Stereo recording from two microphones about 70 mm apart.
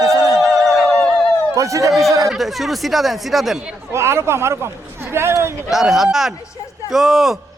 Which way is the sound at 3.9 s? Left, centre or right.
Right.